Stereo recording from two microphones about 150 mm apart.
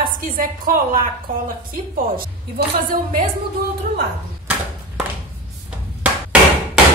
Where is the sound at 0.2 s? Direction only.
70° right (ahead or behind).